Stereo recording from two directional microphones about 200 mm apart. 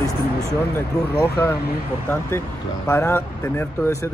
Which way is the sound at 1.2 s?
15° left (ahead or behind).